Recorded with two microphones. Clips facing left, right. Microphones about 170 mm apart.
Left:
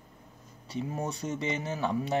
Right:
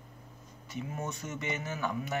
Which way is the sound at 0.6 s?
35° left (ahead or behind).